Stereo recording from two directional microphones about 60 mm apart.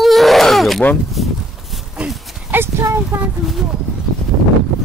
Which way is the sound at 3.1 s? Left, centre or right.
Right.